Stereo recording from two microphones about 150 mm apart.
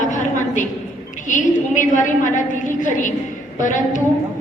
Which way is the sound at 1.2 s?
60° left (ahead or behind).